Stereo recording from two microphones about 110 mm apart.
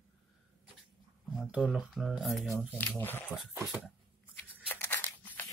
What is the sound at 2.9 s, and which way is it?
Speech, 20° left (ahead or behind).